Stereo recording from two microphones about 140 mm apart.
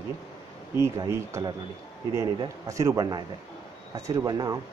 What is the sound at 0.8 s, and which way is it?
Speech, 20° right (ahead or behind).